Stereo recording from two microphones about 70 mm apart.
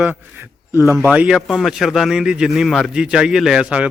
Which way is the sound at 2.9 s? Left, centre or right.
Centre.